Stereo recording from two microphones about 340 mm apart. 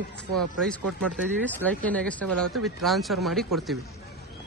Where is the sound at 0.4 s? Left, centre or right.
Centre.